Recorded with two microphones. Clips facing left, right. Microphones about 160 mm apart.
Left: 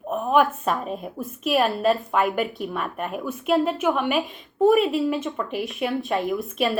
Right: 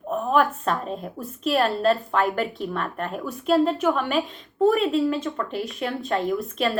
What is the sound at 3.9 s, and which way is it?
Speech, 20° left (ahead or behind).